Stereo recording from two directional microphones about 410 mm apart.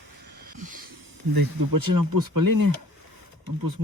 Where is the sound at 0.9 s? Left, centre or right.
Right.